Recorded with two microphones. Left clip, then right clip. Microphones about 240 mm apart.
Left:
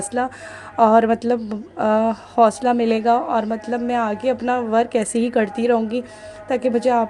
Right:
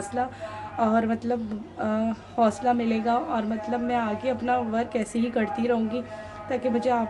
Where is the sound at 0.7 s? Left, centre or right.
Left.